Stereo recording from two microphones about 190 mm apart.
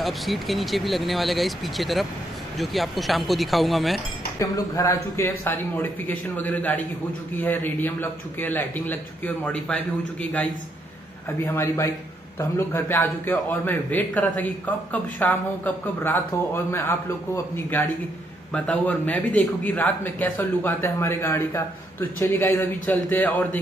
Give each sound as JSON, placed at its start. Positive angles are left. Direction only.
{"t": 0.0, "sound": "speech", "side_deg": 0}
{"t": 4.4, "sound": "a man's voice", "side_deg": 15}
{"t": 11.4, "sound": "a man's voice", "side_deg": 10}
{"t": 18.5, "sound": "a man's voice", "side_deg": 5}